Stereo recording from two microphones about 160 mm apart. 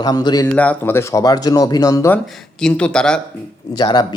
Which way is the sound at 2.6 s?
5° left (ahead or behind).